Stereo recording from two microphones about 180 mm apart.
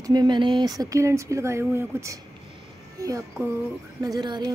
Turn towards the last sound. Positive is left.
turn(degrees=-25)  # may be behind; listen again after turning